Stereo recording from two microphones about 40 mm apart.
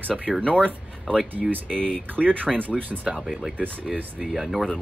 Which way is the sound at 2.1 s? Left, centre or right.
Right.